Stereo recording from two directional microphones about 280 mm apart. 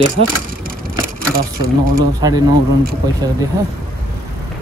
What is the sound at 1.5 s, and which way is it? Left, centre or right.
Speech, right.